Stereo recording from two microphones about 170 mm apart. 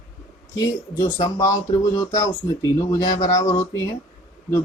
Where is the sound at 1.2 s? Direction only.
20° left (ahead or behind).